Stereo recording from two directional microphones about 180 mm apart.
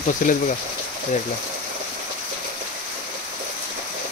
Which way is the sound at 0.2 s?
50° left (ahead or behind).